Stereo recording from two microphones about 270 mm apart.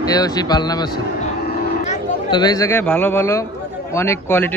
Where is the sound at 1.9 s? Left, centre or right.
Centre.